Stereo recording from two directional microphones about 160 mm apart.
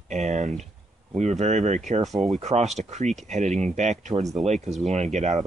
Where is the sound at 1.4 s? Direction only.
45° right (ahead or behind).